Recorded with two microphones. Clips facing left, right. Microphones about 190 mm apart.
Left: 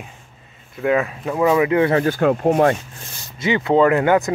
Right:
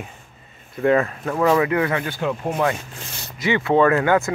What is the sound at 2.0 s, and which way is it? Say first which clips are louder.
Speech: left 8 dB; 50° left (ahead or behind).